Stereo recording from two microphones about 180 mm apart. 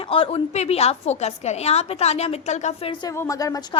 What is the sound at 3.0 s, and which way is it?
Speech, 15° left (ahead or behind).